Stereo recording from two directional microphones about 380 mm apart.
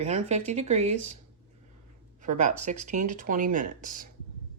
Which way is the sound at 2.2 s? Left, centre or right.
Centre.